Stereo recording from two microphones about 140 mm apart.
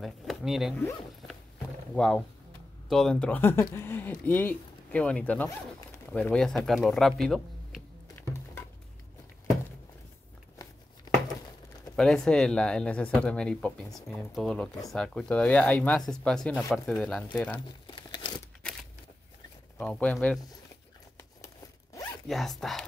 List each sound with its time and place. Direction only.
0.0 s speech: centre (ahead or behind)
2.0 s speech: 5° left (ahead or behind)
11.9 s speech: 5° left (ahead or behind)
17.9 s crumpling: 35° left (ahead or behind)
19.8 s speech: 10° left (ahead or behind)
22.3 s speech: centre (ahead or behind)